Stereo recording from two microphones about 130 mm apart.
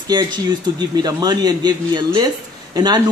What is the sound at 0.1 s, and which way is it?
Speech, 35° right (ahead or behind).